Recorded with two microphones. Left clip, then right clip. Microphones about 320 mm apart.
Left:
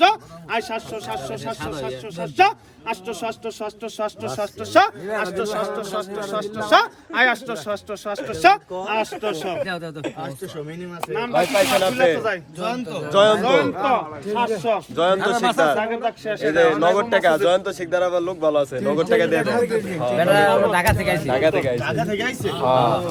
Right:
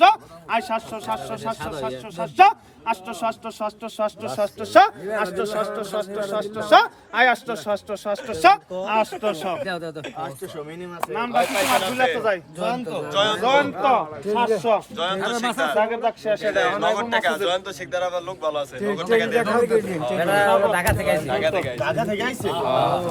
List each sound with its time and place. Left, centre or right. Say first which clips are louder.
0.0 s a man's voice: right 1 dB; right
11.1 s a man's voice: left 2 dB; right
13.1 s speech: left 6 dB; centre
13.4 s a man's voice: even; right
14.9 s speech: left 6 dB; centre
15.7 s a man's voice: right 1 dB; right
16.9 s a man's voice: left 4 dB; centre
19.6 s a man's voice: right 1 dB; centre
20.1 s speech: left 4 dB; centre
20.5 s a man's voice: even; right
20.7 s speech: left 2 dB; centre
21.2 s a man's voice: left 4 dB; centre
21.8 s a man's voice: even; right
22.6 s speech: left 4 dB; centre